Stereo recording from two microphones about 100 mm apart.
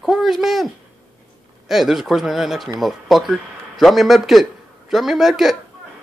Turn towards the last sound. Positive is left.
turn(degrees=-5)  # may be behind; listen again after turning